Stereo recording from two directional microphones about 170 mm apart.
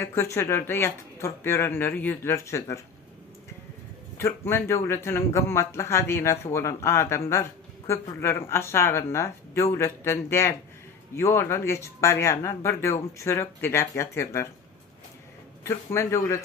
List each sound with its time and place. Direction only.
0.0 s speech: 15° left (ahead or behind)
4.2 s speech: 15° left (ahead or behind)
15.6 s speech: 15° left (ahead or behind)